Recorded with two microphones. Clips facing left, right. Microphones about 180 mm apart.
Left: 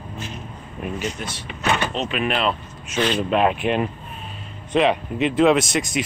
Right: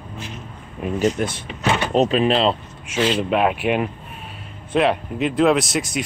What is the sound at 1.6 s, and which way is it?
Speech, 20° right (ahead or behind).